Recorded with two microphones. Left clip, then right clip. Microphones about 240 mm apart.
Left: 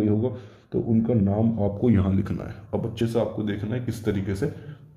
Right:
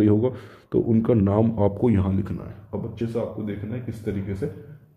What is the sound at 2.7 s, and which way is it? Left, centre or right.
Speech, centre.